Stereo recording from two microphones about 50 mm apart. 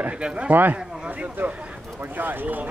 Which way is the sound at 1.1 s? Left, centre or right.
Right.